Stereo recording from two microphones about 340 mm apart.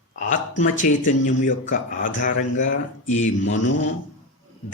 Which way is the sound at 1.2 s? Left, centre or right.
Left.